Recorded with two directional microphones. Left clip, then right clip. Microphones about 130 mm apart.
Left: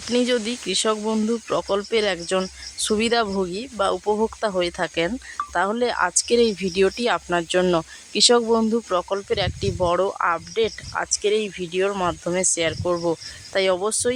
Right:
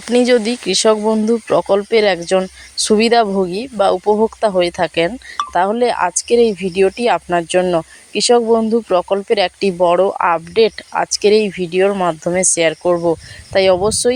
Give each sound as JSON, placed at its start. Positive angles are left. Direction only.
{"t": 0.1, "sound": "speech", "side_deg": -45}
{"t": 1.0, "sound": "speech", "side_deg": -30}
{"t": 7.6, "sound": "speech", "side_deg": -15}
{"t": 8.7, "sound": "speech", "side_deg": -25}
{"t": 9.7, "sound": "speech", "side_deg": -25}
{"t": 10.2, "sound": "speech", "side_deg": -40}